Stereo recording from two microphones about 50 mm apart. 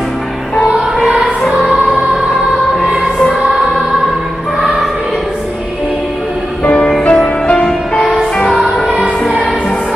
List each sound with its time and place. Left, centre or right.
0.9 s music: centre
2.8 s music: centre
7.0 s music: left
8.8 s music: right